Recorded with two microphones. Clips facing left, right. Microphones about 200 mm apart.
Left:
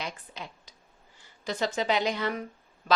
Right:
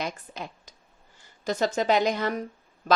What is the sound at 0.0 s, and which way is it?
A woman's voice, 45° right (ahead or behind).